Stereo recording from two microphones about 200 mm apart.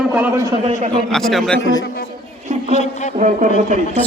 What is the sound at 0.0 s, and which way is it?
Speech, 10° right (ahead or behind).